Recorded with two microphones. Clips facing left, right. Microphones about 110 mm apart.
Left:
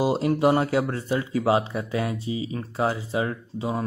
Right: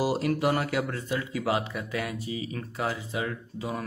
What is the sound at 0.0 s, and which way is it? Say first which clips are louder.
Speech: left 5 dB; 25° left (ahead or behind).